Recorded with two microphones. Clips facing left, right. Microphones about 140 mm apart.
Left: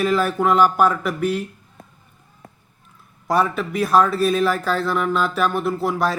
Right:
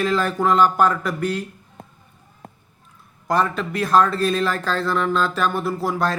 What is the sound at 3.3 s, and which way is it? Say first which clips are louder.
A man's voice: left 1 dB; 5° left (ahead or behind).